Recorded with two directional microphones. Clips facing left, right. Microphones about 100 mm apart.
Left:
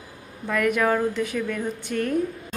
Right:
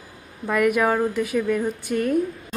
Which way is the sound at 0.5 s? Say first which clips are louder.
Right 2 dB; 10° right (ahead or behind).